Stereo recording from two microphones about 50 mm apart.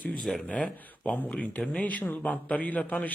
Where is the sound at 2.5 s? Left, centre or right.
Left.